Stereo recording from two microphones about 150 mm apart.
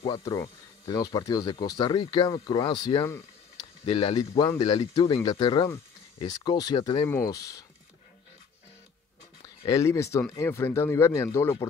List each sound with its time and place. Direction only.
0.2 s speech: 20° left (ahead or behind)
9.4 s speech: 20° left (ahead or behind)